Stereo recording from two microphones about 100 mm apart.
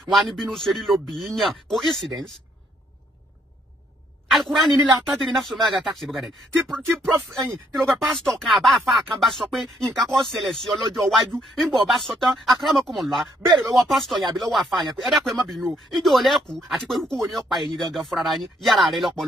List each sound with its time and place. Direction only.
0.0 s speech: centre (ahead or behind)
4.3 s a sound: centre (ahead or behind)
5.1 s speech: centre (ahead or behind)